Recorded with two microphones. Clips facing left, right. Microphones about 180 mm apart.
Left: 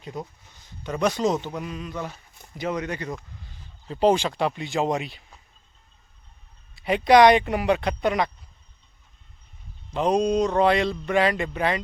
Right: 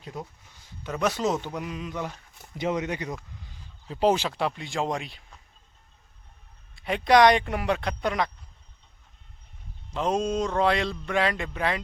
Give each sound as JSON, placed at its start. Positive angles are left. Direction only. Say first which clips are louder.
{"t": 0.0, "sound": "speech", "louder": "left 3 dB", "side_deg": -5}
{"t": 2.0, "sound": "a sound", "louder": "even", "side_deg": 5}
{"t": 2.6, "sound": "speech", "louder": "even", "side_deg": -20}
{"t": 3.8, "sound": "speech", "louder": "left 3 dB", "side_deg": -5}
{"t": 6.7, "sound": "speech", "louder": "left 3 dB", "side_deg": 5}
{"t": 9.9, "sound": "speech", "louder": "left 5 dB", "side_deg": 0}